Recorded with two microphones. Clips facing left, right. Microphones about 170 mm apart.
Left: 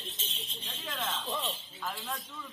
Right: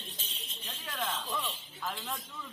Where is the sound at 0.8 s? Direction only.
Centre (ahead or behind).